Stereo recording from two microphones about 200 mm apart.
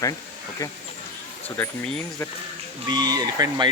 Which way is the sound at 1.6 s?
5° left (ahead or behind).